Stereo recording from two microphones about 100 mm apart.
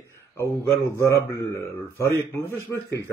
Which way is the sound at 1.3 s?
25° left (ahead or behind).